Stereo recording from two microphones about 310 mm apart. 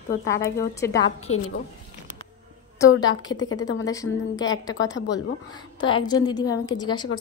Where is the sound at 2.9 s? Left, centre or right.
Left.